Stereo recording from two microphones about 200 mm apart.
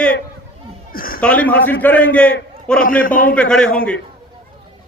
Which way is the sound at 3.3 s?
5° left (ahead or behind).